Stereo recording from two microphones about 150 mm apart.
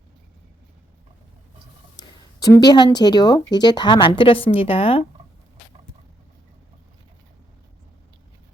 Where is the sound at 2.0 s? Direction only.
25° left (ahead or behind).